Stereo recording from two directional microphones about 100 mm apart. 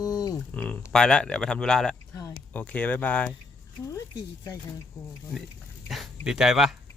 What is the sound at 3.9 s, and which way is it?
Speech, 40° left (ahead or behind).